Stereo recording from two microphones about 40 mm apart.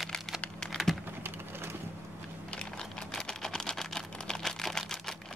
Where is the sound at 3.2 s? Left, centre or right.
Centre.